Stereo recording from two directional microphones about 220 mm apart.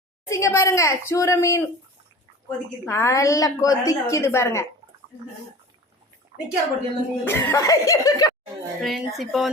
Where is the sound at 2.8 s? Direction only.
10° left (ahead or behind).